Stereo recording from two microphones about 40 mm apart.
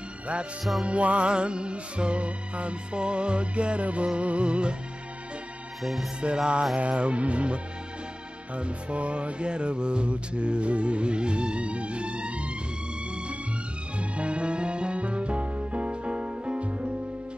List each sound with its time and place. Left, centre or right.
0.8 s music: right
5.8 s music: centre
6.2 s music: right
6.8 s speech: right
8.5 s music: right
13.9 s music: right